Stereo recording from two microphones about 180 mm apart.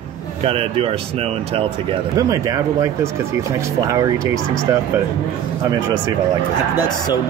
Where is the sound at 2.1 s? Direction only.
20° right (ahead or behind).